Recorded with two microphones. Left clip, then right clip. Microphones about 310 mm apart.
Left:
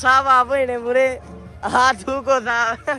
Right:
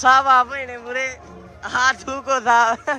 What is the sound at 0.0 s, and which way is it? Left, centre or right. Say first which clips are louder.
Speech: right 1 dB; centre.